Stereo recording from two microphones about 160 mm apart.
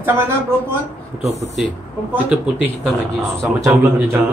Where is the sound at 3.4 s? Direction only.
15° right (ahead or behind).